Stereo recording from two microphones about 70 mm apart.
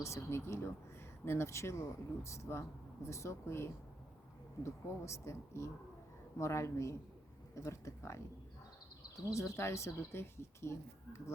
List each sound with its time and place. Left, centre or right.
0.0 s speech: left
9.3 s speech: left